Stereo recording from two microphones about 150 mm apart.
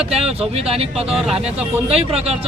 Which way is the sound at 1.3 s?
40° right (ahead or behind).